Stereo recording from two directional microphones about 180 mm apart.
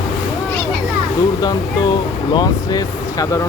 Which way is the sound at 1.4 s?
25° left (ahead or behind).